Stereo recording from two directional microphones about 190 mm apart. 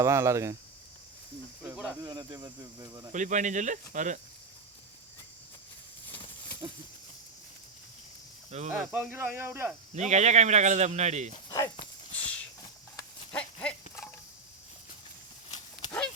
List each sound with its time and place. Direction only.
0.0 s speech: 15° right (ahead or behind)
1.6 s snake: 5° right (ahead or behind)
2.0 s speech: 20° right (ahead or behind)
3.1 s speech: 40° right (ahead or behind)
6.1 s a sound: 25° left (ahead or behind)
8.4 s speech: 35° right (ahead or behind)
8.8 s speech: 5° right (ahead or behind)
9.9 s speech: 35° right (ahead or behind)
11.4 s speech: 15° left (ahead or behind)
12.1 s a sound: 5° left (ahead or behind)
13.3 s livestock: 5° left (ahead or behind)